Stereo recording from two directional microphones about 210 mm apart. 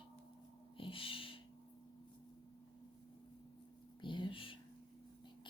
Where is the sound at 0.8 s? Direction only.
25° left (ahead or behind).